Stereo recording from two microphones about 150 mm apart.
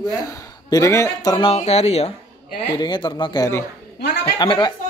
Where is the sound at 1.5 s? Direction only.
45° left (ahead or behind).